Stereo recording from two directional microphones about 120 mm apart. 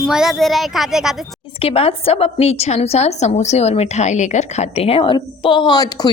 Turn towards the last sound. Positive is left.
turn(degrees=35)  # may be behind; listen again after turning